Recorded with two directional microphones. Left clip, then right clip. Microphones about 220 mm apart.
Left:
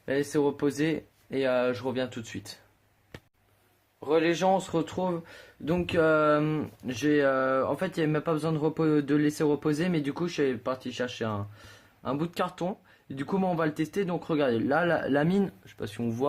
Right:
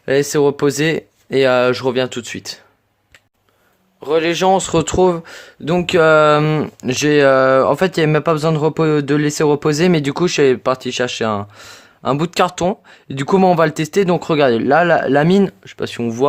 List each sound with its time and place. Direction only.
0.0 s speech: 45° right (ahead or behind)
4.0 s speech: 40° right (ahead or behind)